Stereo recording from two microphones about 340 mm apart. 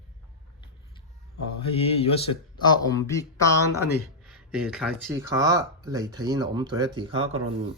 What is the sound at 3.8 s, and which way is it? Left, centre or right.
Speech, left.